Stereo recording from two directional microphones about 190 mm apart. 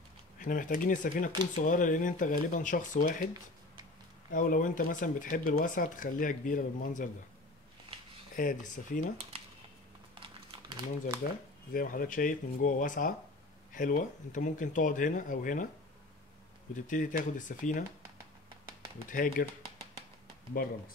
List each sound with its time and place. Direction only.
0.4 s speech: 45° left (ahead or behind)
4.3 s speech: 45° left (ahead or behind)
8.4 s speech: 45° left (ahead or behind)
10.2 s crumpling: 25° right (ahead or behind)
11.7 s speech: 45° left (ahead or behind)
16.7 s speech: 45° left (ahead or behind)
19.0 s speech: 45° left (ahead or behind)